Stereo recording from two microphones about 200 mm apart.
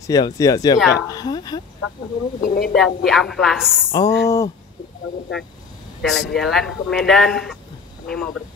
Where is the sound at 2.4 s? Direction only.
45° left (ahead or behind).